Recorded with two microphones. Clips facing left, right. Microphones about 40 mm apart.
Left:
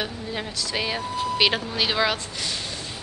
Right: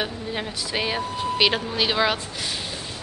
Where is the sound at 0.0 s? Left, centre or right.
Centre.